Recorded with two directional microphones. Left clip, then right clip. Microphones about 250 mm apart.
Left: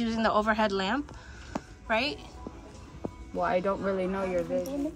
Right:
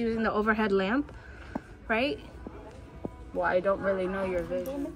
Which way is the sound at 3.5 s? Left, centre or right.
Left.